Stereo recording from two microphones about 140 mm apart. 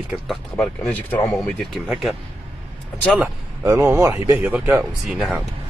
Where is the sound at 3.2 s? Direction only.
15° right (ahead or behind).